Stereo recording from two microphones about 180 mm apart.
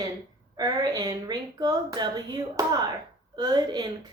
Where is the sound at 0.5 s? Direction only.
20° right (ahead or behind).